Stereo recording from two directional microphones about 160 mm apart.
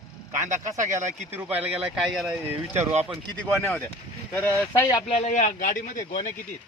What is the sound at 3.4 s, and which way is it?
Speech, 10° left (ahead or behind).